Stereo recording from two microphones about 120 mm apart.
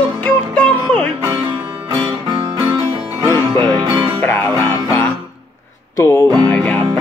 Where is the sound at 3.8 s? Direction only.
45° right (ahead or behind).